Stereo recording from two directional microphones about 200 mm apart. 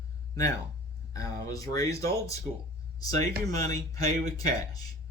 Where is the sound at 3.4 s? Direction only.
15° left (ahead or behind).